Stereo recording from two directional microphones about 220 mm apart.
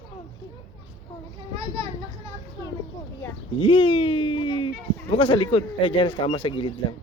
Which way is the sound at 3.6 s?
25° left (ahead or behind).